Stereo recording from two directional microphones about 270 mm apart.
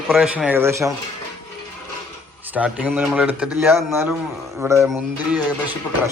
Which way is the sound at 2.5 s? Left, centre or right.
Centre.